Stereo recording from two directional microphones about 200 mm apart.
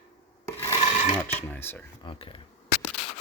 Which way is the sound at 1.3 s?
10° left (ahead or behind).